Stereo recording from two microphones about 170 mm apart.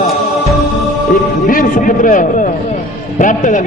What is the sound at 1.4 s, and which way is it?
A man's voice, 55° left (ahead or behind).